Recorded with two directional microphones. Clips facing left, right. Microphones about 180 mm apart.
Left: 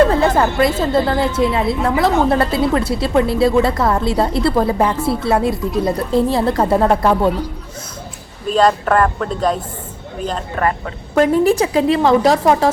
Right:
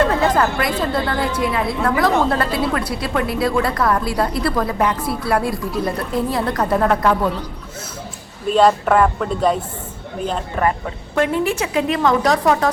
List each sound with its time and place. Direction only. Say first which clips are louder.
0.1 s a woman's voice: left 2 dB; 25° left (ahead or behind)
8.5 s speech: even; 5° right (ahead or behind)
11.1 s a woman's voice: left 6 dB; 40° left (ahead or behind)